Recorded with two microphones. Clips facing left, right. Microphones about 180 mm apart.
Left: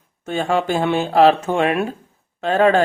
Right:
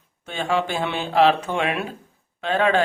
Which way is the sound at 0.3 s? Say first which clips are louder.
Left 4 dB; 45° left (ahead or behind).